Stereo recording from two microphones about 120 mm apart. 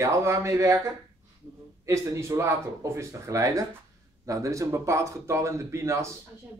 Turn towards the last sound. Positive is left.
turn(degrees=-25)  # may be behind; listen again after turning